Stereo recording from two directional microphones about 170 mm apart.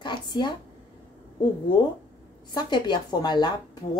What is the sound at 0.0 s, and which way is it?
Speech, 25° left (ahead or behind).